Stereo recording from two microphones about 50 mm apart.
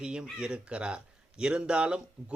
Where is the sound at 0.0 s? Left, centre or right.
Centre.